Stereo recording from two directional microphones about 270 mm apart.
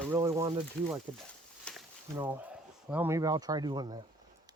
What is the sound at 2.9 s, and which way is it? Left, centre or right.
Speech, centre.